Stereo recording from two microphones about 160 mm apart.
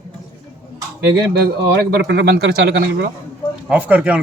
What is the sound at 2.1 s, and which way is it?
Speech, 90° right.